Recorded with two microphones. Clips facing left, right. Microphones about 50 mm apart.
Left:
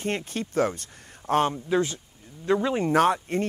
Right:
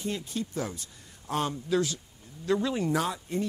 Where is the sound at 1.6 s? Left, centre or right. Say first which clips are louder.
Left 3 dB; left.